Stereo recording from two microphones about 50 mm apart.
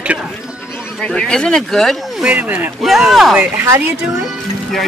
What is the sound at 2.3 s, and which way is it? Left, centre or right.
Speech, right.